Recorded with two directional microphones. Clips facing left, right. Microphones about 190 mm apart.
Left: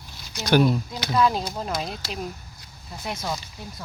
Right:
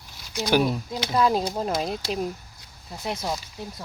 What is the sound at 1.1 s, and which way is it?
Speech, 40° right (ahead or behind).